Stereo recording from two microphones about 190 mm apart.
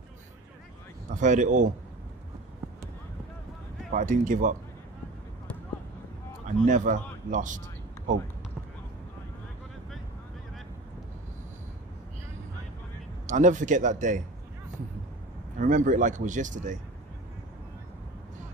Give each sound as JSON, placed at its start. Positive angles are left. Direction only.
{"t": 1.1, "sound": "speech", "side_deg": -40}
{"t": 3.9, "sound": "speech", "side_deg": -40}
{"t": 6.4, "sound": "a man's voice", "side_deg": -40}
{"t": 13.3, "sound": "speech", "side_deg": -40}
{"t": 15.6, "sound": "speech", "side_deg": -40}